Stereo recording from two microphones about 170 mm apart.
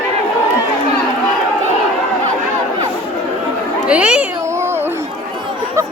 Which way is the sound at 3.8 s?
5° right (ahead or behind).